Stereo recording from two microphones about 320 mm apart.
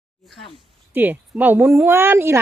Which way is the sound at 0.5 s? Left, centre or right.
Centre.